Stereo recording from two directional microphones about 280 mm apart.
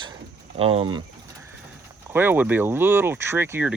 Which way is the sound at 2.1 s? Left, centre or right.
Centre.